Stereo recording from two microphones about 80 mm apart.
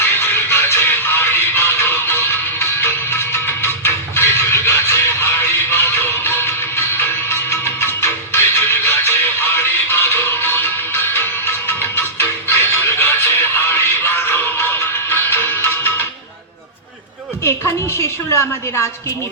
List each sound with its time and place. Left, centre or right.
0.0 s music: left
17.9 s a woman's voice: left